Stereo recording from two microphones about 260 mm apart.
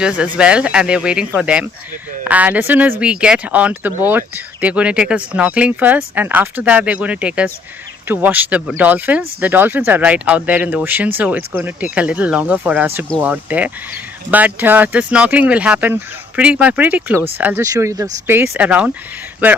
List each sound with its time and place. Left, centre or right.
0.3 s speech: centre